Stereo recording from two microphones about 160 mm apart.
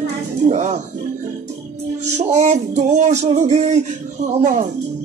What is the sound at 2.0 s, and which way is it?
Music, 45° right (ahead or behind).